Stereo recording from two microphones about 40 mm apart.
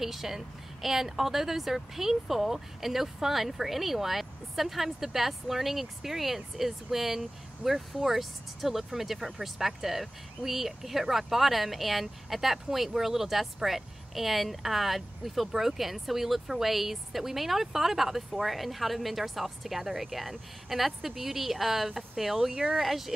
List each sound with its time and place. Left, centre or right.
0.0 s a woman's voice: centre